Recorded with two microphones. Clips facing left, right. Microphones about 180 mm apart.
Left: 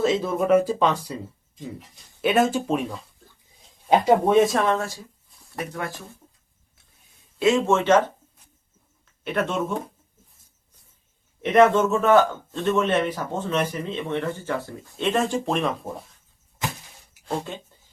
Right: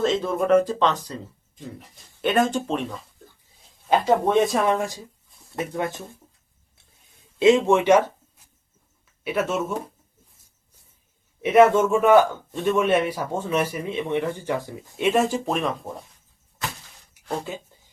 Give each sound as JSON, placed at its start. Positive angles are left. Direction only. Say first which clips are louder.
{"t": 0.0, "sound": "speech", "louder": "even", "side_deg": 5}
{"t": 2.2, "sound": "speech", "louder": "left 1 dB", "side_deg": 5}
{"t": 4.6, "sound": "a man's voice", "louder": "right 1 dB", "side_deg": -15}
{"t": 7.3, "sound": "speech", "louder": "right 3 dB", "side_deg": -20}
{"t": 11.4, "sound": "a man's voice", "louder": "right 1 dB", "side_deg": -5}